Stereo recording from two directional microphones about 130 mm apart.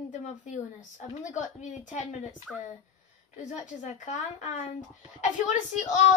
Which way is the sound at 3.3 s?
75° left (ahead or behind).